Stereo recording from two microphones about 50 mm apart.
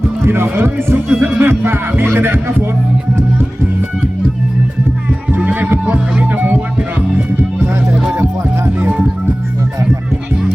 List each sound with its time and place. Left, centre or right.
0.3 s speech: right
5.4 s music: right
7.9 s music: centre
8.8 s music: right